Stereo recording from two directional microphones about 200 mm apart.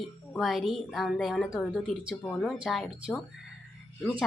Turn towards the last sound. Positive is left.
turn(degrees=0)  # may be behind; listen again after turning